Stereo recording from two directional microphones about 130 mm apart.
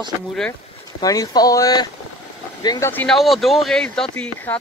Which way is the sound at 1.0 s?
30° left (ahead or behind).